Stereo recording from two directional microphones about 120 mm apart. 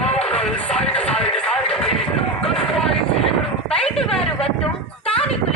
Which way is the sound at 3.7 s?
5° left (ahead or behind).